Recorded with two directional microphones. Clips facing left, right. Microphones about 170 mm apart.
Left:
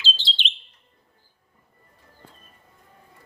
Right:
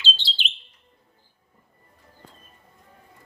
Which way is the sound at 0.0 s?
Centre (ahead or behind).